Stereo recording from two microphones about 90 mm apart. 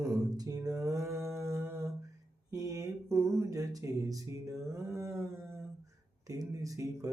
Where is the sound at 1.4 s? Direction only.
30° right (ahead or behind).